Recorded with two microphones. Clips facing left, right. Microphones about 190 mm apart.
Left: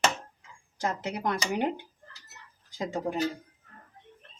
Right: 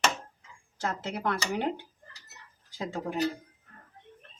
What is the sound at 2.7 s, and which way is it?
Speech, 15° left (ahead or behind).